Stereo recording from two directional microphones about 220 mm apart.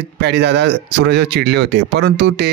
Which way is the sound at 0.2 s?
50° right (ahead or behind).